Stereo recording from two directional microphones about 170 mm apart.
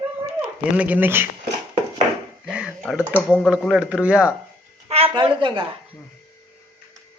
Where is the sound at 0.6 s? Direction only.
10° right (ahead or behind).